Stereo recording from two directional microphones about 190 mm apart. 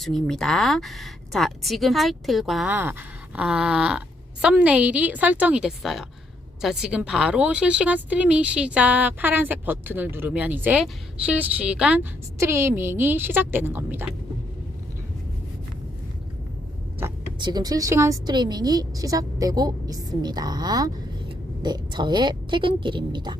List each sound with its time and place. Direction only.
0.0 s speech: centre (ahead or behind)
17.0 s vehicle: 15° right (ahead or behind)
17.4 s a woman's voice: 20° right (ahead or behind)